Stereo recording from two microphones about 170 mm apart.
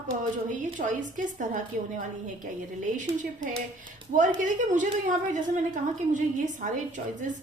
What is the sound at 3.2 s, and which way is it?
A woman's voice, 50° right (ahead or behind).